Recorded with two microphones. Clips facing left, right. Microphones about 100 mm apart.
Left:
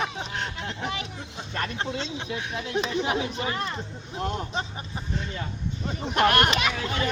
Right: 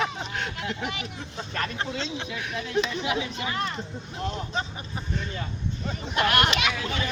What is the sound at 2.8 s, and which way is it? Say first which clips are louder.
Speech: left 1 dB; 40° left (ahead or behind).